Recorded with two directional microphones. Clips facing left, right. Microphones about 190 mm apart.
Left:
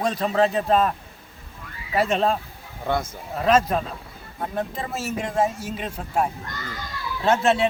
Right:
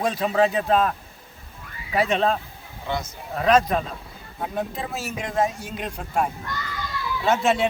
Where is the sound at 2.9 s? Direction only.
50° left (ahead or behind).